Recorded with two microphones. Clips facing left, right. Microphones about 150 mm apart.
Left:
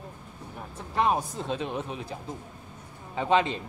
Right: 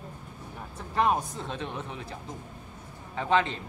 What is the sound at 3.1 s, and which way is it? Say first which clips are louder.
Speech: left 2 dB; 15° left (ahead or behind).